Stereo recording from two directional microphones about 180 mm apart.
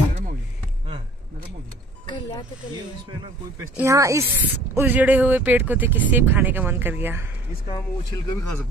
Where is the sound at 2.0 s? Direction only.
25° left (ahead or behind).